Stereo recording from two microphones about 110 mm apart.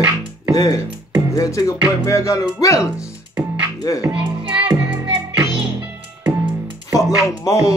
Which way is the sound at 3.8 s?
35° left (ahead or behind).